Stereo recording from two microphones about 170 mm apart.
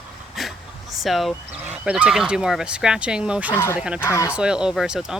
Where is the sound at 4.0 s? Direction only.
15° left (ahead or behind).